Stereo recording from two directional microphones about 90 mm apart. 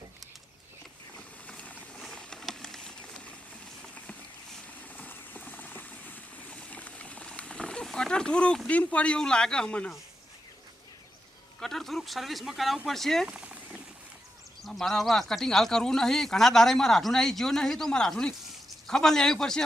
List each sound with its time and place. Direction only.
1.5 s vehicle: 15° left (ahead or behind)
2.0 s a sound: 5° left (ahead or behind)
4.9 s clip-clop: 20° left (ahead or behind)
11.6 s speech: 5° left (ahead or behind)
13.2 s a sound: 15° right (ahead or behind)
14.6 s a man's voice: 5° left (ahead or behind)